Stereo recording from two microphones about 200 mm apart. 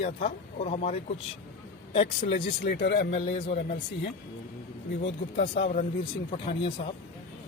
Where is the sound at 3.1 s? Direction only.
30° left (ahead or behind).